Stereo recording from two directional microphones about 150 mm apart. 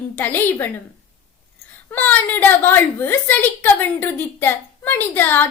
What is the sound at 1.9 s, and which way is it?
A woman's voice, 10° left (ahead or behind).